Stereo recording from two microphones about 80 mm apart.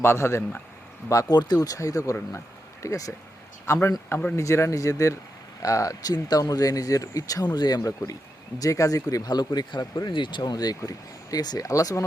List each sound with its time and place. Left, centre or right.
0.0 s speech: left
1.4 s speech: left
7.4 s speech: left
8.5 s speech: left
10.1 s speech: left